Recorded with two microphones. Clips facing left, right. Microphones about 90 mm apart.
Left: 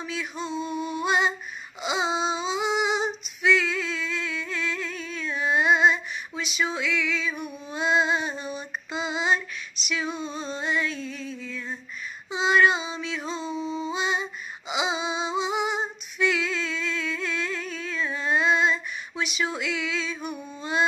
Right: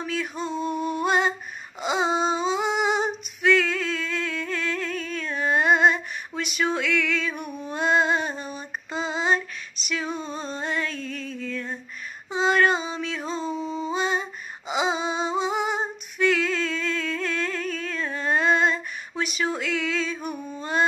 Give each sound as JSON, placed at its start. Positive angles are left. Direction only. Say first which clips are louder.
{"t": 0.0, "sound": "female singing", "louder": "right 3 dB", "side_deg": -45}
{"t": 12.3, "sound": "a sound", "louder": "even", "side_deg": -45}
{"t": 14.7, "sound": "female singing", "louder": "right 2 dB", "side_deg": -45}